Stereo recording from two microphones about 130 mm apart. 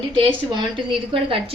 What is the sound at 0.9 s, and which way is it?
Speech, 40° right (ahead or behind).